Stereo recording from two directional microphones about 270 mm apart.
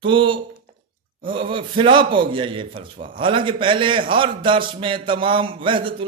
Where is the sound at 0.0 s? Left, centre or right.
Centre.